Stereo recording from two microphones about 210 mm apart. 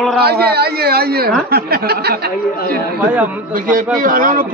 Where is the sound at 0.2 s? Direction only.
50° right (ahead or behind).